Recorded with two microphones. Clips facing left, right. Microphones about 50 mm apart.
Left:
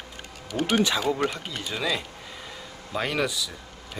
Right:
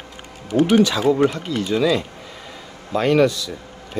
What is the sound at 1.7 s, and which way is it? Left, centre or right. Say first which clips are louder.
Speech: right 9 dB; centre.